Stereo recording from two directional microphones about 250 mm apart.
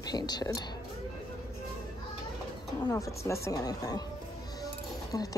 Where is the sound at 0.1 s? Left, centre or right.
Centre.